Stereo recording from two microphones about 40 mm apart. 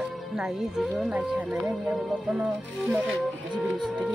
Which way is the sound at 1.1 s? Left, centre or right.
Right.